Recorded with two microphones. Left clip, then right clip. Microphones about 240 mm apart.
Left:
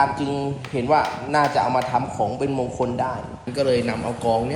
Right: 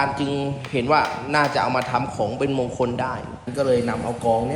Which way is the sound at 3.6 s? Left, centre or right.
Left.